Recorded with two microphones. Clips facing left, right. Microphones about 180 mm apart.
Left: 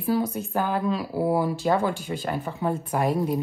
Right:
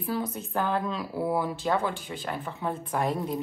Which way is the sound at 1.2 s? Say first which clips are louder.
Left 3 dB; 30° left (ahead or behind).